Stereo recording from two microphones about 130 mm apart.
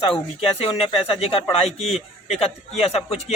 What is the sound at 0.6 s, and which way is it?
A man's voice, 50° left (ahead or behind).